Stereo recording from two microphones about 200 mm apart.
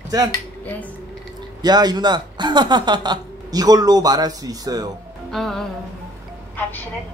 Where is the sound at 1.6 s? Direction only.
20° right (ahead or behind).